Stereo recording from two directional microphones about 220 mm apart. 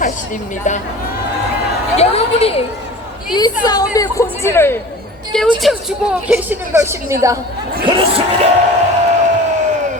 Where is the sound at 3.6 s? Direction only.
15° left (ahead or behind).